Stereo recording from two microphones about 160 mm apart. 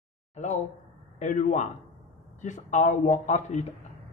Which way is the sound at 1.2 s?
50° left (ahead or behind).